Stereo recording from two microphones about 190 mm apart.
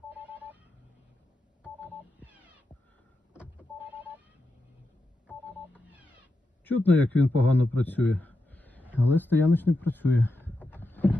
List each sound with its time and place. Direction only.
0.1 s a sound: 10° right (ahead or behind)
2.2 s telephone dialing: 5° right (ahead or behind)
3.3 s power windows: 5° right (ahead or behind)
5.7 s telephone dialing: 5° right (ahead or behind)
6.7 s a man's voice: 10° left (ahead or behind)
8.8 s a sound: 10° right (ahead or behind)
9.0 s speech: 10° left (ahead or behind)